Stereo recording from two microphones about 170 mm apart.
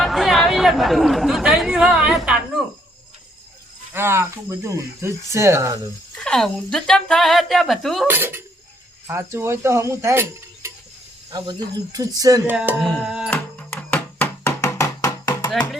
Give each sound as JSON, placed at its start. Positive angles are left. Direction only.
{"t": 0.0, "sound": "chatter", "side_deg": 0}
{"t": 3.9, "sound": "speech", "side_deg": -15}
{"t": 6.1, "sound": "a woman's voice", "side_deg": 5}
{"t": 8.0, "sound": "speech", "side_deg": -15}
{"t": 12.5, "sound": "a woman's voice", "side_deg": -5}
{"t": 13.3, "sound": "music", "side_deg": 10}